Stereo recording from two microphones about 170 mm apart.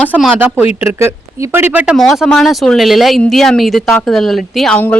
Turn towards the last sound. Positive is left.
turn(degrees=5)  # may be behind; listen again after turning